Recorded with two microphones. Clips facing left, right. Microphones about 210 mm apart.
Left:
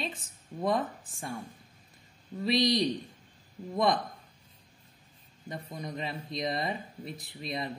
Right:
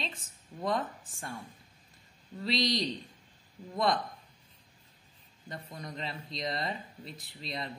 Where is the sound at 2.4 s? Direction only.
15° left (ahead or behind).